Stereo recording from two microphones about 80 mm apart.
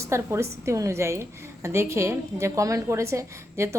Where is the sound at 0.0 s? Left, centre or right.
Right.